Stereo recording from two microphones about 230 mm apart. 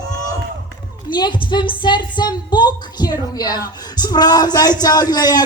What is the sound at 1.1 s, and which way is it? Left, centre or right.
Speech, centre.